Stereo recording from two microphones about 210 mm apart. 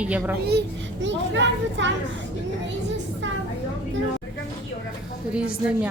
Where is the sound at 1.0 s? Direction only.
60° right (ahead or behind).